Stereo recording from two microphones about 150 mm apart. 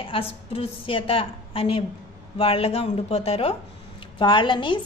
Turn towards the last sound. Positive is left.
turn(degrees=30)  # may be behind; listen again after turning